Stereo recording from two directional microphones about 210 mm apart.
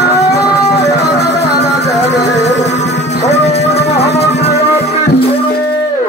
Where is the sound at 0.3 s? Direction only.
15° left (ahead or behind).